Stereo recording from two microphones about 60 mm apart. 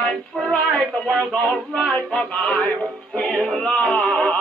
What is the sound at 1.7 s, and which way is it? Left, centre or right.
Music, centre.